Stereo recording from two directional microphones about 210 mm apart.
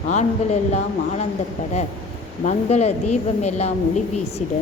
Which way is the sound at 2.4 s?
35° left (ahead or behind).